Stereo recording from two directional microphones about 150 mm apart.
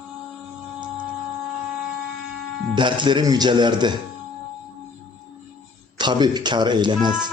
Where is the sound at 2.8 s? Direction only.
30° right (ahead or behind).